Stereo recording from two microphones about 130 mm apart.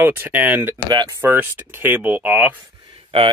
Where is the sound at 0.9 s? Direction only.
35° right (ahead or behind).